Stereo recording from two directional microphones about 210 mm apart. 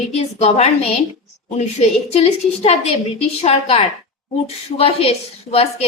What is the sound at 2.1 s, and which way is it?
A woman's voice, 30° left (ahead or behind).